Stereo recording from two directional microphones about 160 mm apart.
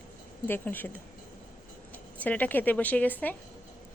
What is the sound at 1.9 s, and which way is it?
Speech, 10° left (ahead or behind).